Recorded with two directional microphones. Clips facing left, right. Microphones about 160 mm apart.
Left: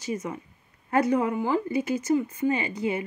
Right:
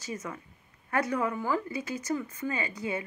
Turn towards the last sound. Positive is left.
turn(degrees=25)  # may be behind; listen again after turning